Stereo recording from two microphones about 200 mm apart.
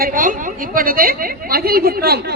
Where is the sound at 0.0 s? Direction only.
45° right (ahead or behind).